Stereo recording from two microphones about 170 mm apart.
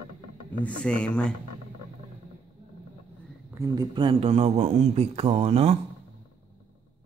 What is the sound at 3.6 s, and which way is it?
A man's voice, 20° right (ahead or behind).